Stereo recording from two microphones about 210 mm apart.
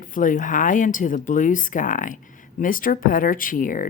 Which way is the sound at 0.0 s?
40° left (ahead or behind).